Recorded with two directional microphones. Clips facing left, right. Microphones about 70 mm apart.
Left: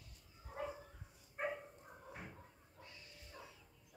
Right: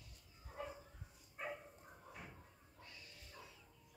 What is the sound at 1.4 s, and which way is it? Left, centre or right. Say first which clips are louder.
Dog: left 5 dB; left.